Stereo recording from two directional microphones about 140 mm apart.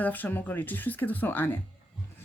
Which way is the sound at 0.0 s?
10° left (ahead or behind).